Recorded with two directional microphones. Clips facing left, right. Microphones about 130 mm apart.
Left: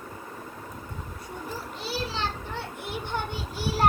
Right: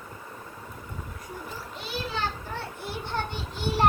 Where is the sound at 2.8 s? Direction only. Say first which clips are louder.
Even; 15° left (ahead or behind).